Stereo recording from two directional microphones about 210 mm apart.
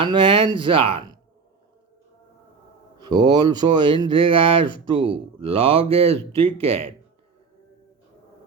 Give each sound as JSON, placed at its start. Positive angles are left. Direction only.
{"t": 0.0, "sound": "speech", "side_deg": -25}
{"t": 3.0, "sound": "speech", "side_deg": -20}